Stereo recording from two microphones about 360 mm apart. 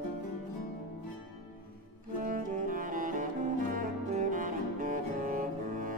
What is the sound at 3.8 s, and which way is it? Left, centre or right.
Double bass, right.